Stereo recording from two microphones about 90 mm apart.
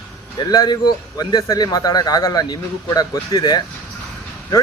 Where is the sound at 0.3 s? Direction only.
50° left (ahead or behind).